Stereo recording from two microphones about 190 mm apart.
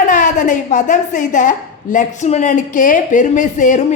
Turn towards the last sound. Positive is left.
turn(degrees=40)  # may be behind; listen again after turning